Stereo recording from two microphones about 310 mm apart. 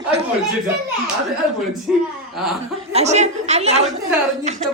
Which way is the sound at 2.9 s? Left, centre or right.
Right.